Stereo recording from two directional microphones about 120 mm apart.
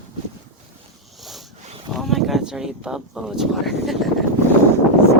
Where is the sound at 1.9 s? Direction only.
Centre (ahead or behind).